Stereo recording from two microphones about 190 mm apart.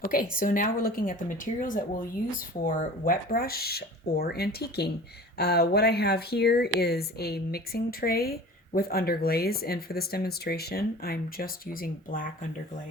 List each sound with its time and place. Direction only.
0.1 s speech: 45° left (ahead or behind)